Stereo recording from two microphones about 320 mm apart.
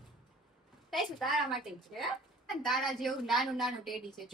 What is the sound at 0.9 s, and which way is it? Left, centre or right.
A woman's voice, centre.